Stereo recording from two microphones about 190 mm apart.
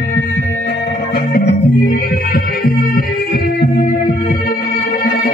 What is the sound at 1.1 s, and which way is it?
Music, 50° left (ahead or behind).